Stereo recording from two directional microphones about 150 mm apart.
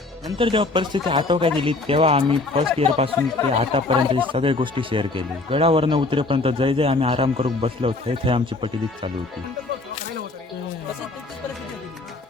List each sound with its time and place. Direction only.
0.3 s speech: 35° right (ahead or behind)